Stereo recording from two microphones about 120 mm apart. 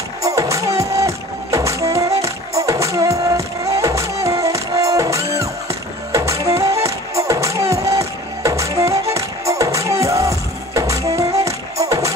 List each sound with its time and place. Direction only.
0.2 s music: 25° right (ahead or behind)